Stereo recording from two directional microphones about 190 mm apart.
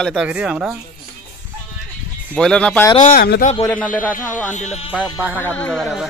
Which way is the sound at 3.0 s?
50° left (ahead or behind).